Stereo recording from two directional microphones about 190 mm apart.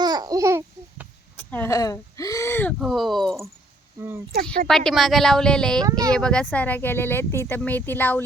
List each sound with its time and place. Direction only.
0.0 s babbling: 20° right (ahead or behind)
1.4 s speech: 10° left (ahead or behind)
2.7 s speech: centre (ahead or behind)
4.6 s speech: 5° left (ahead or behind)
5.8 s speech: 20° right (ahead or behind)
6.1 s speech: 5° left (ahead or behind)